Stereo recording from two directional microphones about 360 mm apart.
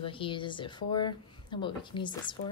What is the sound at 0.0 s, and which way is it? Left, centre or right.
Speech, centre.